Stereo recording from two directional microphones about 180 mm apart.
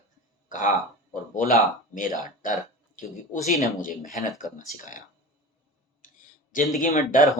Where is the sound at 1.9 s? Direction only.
50° left (ahead or behind).